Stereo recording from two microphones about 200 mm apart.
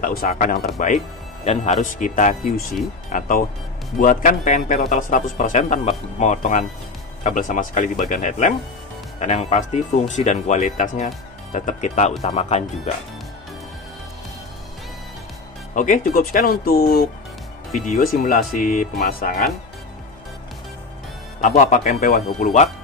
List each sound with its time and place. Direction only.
0.0 s speech: 45° left (ahead or behind)
15.7 s speech: 40° left (ahead or behind)
21.4 s speech: 40° left (ahead or behind)